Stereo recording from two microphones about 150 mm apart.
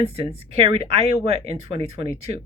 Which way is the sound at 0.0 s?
40° right (ahead or behind).